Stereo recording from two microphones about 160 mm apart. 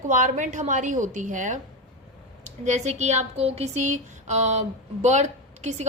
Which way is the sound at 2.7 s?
45° right (ahead or behind).